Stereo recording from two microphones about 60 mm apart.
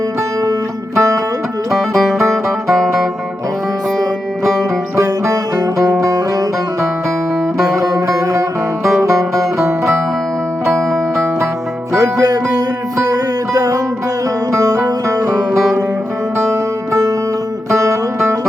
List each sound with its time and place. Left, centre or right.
0.9 s music: right
1.7 s music: centre
5.3 s music: right
7.6 s music: right
11.9 s music: right
14.5 s music: right
16.5 s music: right